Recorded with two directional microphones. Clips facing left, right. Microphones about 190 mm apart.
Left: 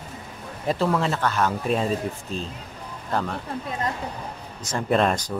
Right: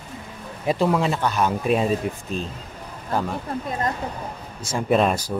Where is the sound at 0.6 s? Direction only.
10° right (ahead or behind).